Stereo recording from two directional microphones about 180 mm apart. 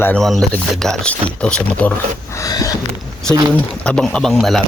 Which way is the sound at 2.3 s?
20° left (ahead or behind).